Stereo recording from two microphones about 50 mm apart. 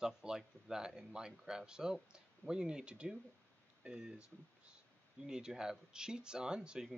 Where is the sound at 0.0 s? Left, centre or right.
Centre.